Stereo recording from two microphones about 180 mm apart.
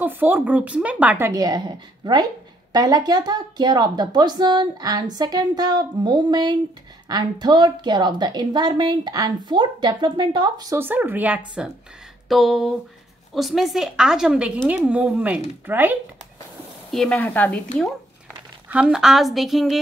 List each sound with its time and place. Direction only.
0.0 s a woman's voice: 10° right (ahead or behind)
16.9 s speech: 5° left (ahead or behind)
18.7 s a woman's voice: 5° right (ahead or behind)